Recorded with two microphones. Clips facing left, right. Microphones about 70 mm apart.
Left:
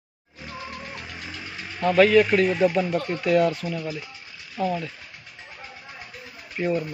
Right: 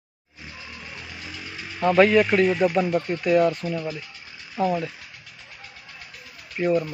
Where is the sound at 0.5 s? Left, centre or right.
Left.